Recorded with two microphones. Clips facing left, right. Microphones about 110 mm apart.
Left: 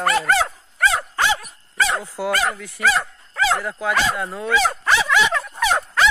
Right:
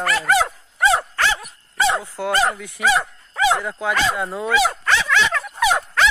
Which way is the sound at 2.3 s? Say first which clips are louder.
Right 4 dB; 25° right (ahead or behind).